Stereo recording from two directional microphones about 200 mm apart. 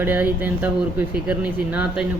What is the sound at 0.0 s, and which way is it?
Speech, 10° right (ahead or behind).